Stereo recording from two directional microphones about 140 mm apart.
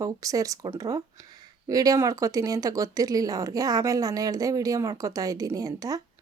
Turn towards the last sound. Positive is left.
turn(degrees=-25)  # may be behind; listen again after turning